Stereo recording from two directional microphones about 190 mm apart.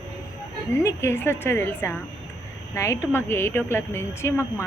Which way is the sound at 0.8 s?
15° left (ahead or behind).